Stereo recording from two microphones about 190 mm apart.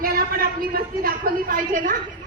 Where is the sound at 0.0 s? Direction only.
50° right (ahead or behind).